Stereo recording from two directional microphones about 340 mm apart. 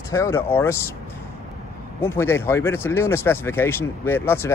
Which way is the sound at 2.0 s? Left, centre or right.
Centre.